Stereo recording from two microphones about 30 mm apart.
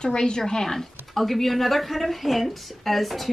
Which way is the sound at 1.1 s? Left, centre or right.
Centre.